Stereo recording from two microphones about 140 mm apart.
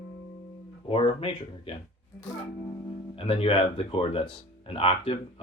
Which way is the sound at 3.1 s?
40° left (ahead or behind).